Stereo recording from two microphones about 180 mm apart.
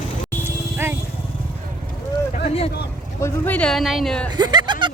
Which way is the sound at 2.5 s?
35° left (ahead or behind).